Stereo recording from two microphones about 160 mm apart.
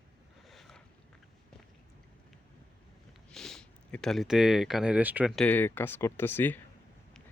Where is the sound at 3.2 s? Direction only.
5° left (ahead or behind).